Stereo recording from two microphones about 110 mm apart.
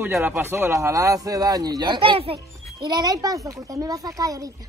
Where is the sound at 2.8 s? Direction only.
40° right (ahead or behind).